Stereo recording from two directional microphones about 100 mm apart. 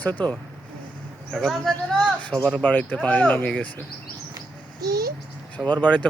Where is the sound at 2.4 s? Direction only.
10° left (ahead or behind).